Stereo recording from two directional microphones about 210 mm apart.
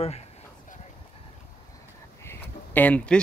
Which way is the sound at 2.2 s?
10° left (ahead or behind).